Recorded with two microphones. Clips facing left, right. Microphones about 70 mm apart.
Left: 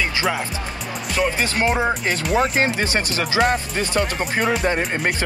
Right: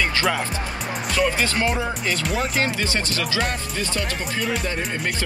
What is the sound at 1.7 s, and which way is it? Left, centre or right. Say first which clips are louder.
Speech: left 4 dB; left.